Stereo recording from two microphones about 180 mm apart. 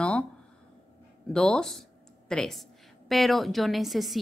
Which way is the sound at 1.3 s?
5° left (ahead or behind).